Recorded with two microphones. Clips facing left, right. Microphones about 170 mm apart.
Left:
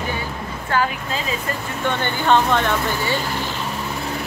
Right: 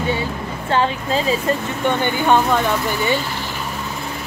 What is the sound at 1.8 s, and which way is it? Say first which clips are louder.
Speech: even; 15° right (ahead or behind).